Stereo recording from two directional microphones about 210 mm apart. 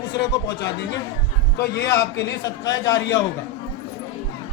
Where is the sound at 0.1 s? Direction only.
20° left (ahead or behind).